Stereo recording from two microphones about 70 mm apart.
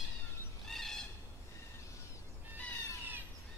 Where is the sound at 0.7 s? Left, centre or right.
Centre.